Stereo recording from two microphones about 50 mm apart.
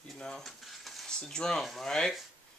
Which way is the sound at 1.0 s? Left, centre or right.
Centre.